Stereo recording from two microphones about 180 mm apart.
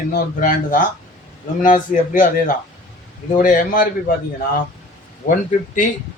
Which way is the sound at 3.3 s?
50° left (ahead or behind).